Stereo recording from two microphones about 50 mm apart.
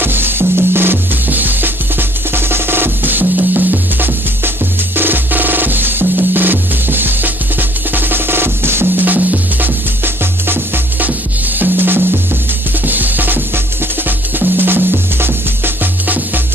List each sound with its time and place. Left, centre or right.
0.0 s music: right
9.0 s music: right
11.5 s drum: right
12.8 s music: right